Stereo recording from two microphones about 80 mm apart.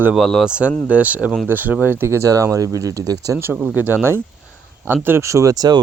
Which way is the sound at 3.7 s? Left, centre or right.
Right.